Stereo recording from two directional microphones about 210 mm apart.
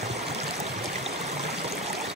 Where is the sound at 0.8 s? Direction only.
30° right (ahead or behind).